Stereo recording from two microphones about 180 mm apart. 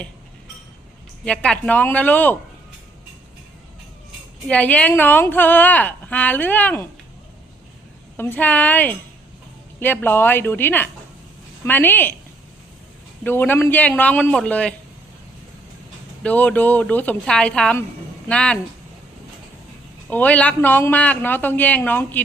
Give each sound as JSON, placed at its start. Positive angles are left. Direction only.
{"t": 1.2, "sound": "a woman's voice", "side_deg": 5}
{"t": 4.4, "sound": "a woman's voice", "side_deg": 10}
{"t": 8.1, "sound": "a woman's voice", "side_deg": 10}
{"t": 13.2, "sound": "a woman's voice", "side_deg": 10}
{"t": 16.2, "sound": "a woman's voice", "side_deg": 10}
{"t": 20.1, "sound": "a woman's voice", "side_deg": 10}